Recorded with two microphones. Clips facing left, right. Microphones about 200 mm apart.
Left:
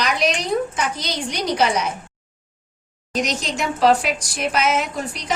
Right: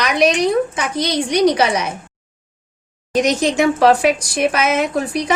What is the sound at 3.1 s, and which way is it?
Speech, 55° right (ahead or behind).